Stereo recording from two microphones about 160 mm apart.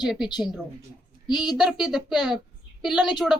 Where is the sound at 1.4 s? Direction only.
5° right (ahead or behind).